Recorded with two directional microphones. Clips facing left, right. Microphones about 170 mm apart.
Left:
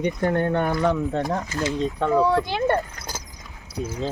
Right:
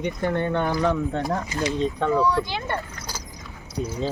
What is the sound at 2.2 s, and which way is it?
Speech, 50° left (ahead or behind).